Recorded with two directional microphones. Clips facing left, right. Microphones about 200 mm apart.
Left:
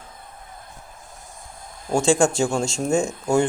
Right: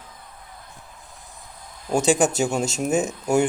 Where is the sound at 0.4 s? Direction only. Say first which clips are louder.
Left 2 dB; 45° left (ahead or behind).